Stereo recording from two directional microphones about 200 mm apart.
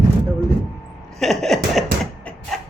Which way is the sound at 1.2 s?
Centre (ahead or behind).